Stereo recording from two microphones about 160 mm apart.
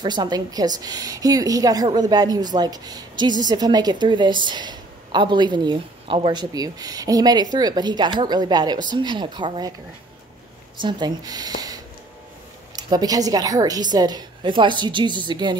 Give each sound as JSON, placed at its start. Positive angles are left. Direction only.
{"t": 0.0, "sound": "a woman's voice", "side_deg": -25}
{"t": 10.8, "sound": "a woman's voice", "side_deg": -30}